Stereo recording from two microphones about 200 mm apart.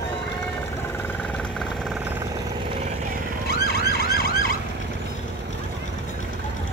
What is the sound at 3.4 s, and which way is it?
Emergency vehicle, 55° left (ahead or behind).